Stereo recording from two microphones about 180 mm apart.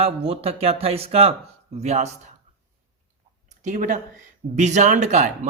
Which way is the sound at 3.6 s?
45° right (ahead or behind).